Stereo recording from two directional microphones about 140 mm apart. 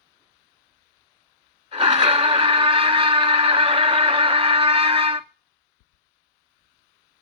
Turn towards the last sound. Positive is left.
turn(degrees=-40)  # may be behind; listen again after turning